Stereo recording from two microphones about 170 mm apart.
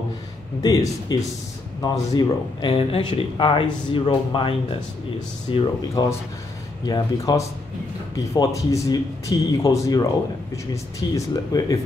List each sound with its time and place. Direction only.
0.6 s speech: 25° left (ahead or behind)
6.9 s speech: 20° left (ahead or behind)